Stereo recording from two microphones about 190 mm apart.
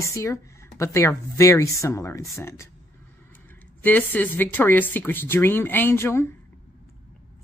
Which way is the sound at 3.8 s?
10° left (ahead or behind).